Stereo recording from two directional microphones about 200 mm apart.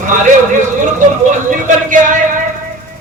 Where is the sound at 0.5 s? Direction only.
40° right (ahead or behind).